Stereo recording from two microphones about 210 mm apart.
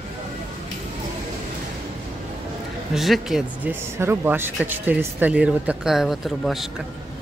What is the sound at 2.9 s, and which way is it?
Speech, centre (ahead or behind).